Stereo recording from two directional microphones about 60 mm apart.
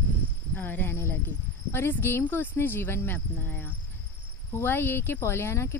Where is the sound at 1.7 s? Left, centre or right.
Left.